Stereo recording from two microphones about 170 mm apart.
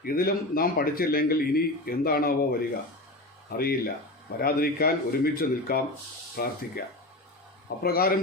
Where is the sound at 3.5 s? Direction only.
65° left (ahead or behind).